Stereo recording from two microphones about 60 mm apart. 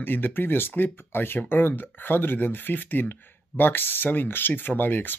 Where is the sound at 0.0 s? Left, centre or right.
Left.